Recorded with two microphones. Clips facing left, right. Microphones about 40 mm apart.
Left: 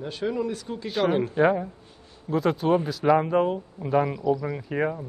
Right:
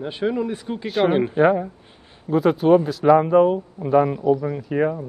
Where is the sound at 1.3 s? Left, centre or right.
Centre.